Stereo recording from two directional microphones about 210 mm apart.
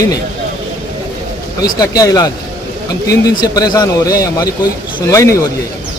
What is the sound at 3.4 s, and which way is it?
Speech, 20° left (ahead or behind).